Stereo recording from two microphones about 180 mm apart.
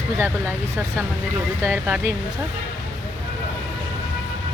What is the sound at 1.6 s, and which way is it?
Speech, 15° right (ahead or behind).